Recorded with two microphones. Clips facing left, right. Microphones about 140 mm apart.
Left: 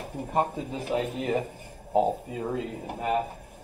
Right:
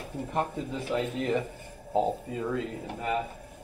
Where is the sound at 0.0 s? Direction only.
40° left (ahead or behind).